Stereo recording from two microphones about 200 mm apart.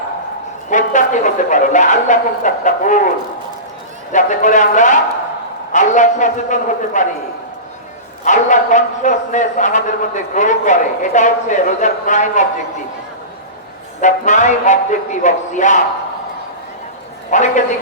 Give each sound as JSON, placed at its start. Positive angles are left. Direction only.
{"t": 0.7, "sound": "speech", "side_deg": 40}
{"t": 4.1, "sound": "speech", "side_deg": 40}
{"t": 8.2, "sound": "speech", "side_deg": 40}
{"t": 14.0, "sound": "speech", "side_deg": 35}
{"t": 17.3, "sound": "speech", "side_deg": 40}